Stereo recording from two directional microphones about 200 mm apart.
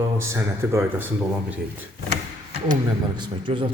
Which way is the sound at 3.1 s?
25° right (ahead or behind).